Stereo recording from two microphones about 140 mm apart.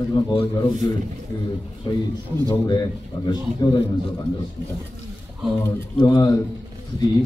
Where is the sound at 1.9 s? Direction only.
30° left (ahead or behind).